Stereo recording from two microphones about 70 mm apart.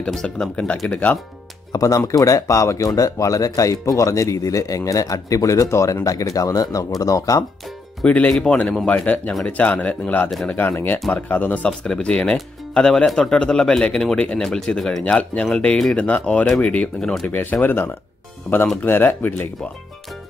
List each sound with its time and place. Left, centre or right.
0.0 s a man's voice: centre
0.8 s speech: left
1.7 s speech: left
8.0 s a man's voice: left
11.8 s a man's voice: centre
17.0 s a man's voice: centre
17.3 s speech: left
18.5 s a man's voice: centre
18.8 s speech: left